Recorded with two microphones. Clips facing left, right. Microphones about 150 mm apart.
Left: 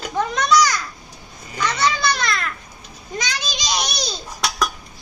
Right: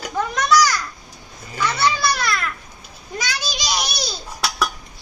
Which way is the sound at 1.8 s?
10° right (ahead or behind).